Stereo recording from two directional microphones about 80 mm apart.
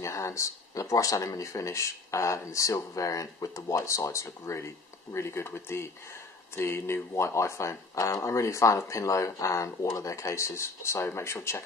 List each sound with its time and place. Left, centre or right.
0.0 s speech: left